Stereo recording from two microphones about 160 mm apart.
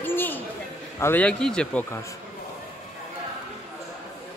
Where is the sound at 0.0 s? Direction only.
10° left (ahead or behind).